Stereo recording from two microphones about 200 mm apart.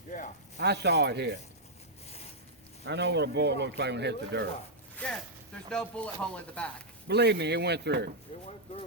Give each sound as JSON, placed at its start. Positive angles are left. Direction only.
{"t": 0.5, "sound": "speech", "side_deg": -55}
{"t": 2.0, "sound": "a sound", "side_deg": 30}
{"t": 2.8, "sound": "speech", "side_deg": -60}
{"t": 5.0, "sound": "speech", "side_deg": 5}
{"t": 7.1, "sound": "speech", "side_deg": -55}